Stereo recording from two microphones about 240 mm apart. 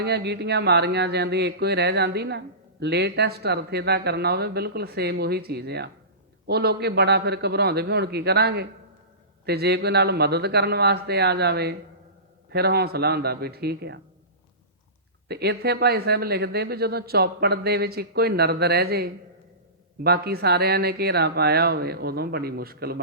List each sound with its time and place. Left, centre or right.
0.0 s speech: right
15.3 s speech: right